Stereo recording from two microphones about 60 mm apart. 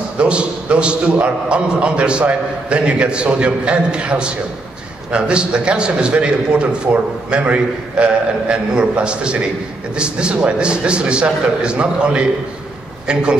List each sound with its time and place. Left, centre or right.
0.2 s a man's voice: centre